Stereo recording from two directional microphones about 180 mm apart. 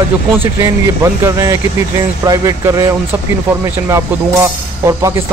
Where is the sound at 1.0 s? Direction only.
15° right (ahead or behind).